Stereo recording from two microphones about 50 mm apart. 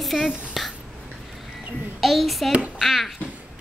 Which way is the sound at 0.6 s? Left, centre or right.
Centre.